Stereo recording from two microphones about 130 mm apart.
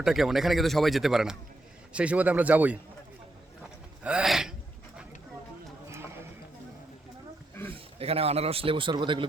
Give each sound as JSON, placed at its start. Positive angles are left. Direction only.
{"t": 0.0, "sound": "a man's voice", "side_deg": 0}
{"t": 4.0, "sound": "speech", "side_deg": -5}
{"t": 7.7, "sound": "speech", "side_deg": -50}